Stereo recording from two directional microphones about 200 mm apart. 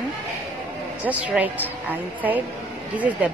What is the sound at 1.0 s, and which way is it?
Speech, 5° right (ahead or behind).